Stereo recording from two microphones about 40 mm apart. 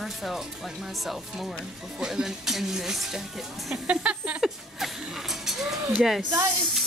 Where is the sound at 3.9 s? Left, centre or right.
Right.